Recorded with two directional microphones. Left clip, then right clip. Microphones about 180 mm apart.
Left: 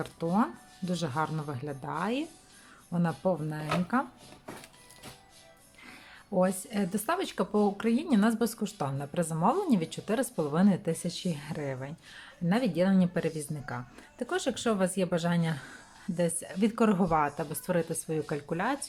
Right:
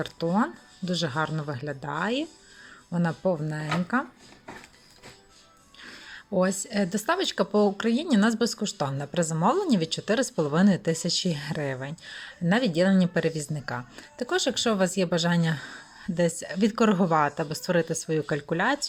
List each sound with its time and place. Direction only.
0.0 s speech: 15° right (ahead or behind)
5.8 s speech: 15° right (ahead or behind)